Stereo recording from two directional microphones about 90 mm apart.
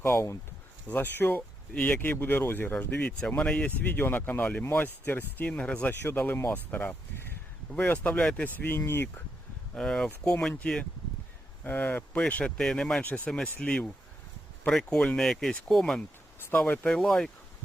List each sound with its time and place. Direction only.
0.0 s speech: 30° left (ahead or behind)
0.9 s speech: 20° left (ahead or behind)
8.5 s speech: 25° left (ahead or behind)
9.7 s speech: 5° left (ahead or behind)
11.6 s speech: 20° left (ahead or behind)